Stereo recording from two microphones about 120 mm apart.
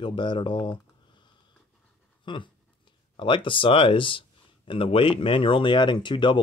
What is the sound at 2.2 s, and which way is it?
Speech, 40° left (ahead or behind).